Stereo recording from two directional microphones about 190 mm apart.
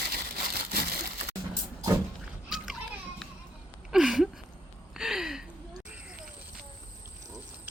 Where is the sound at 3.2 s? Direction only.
Centre (ahead or behind).